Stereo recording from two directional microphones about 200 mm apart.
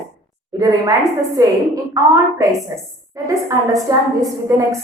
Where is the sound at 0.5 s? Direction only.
20° right (ahead or behind).